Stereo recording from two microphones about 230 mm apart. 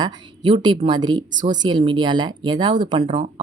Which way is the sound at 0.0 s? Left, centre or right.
Centre.